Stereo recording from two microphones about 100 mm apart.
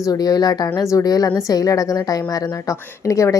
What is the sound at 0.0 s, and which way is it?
A woman's voice, 40° left (ahead or behind).